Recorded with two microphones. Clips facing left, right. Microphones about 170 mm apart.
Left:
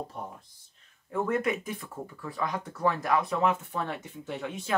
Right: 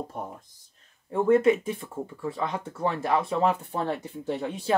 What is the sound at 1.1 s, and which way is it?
Speech, 30° right (ahead or behind).